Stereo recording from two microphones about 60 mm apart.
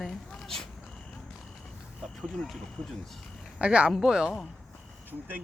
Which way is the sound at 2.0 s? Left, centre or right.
Centre.